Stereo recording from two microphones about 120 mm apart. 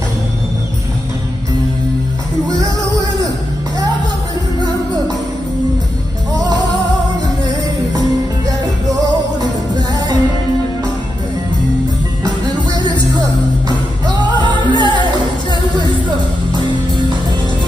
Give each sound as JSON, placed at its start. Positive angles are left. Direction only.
{"t": 6.3, "sound": "music", "side_deg": -30}
{"t": 8.5, "sound": "music", "side_deg": -30}
{"t": 13.7, "sound": "music", "side_deg": -40}